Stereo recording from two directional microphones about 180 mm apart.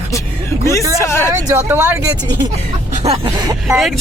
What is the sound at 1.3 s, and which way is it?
Speech, 15° right (ahead or behind).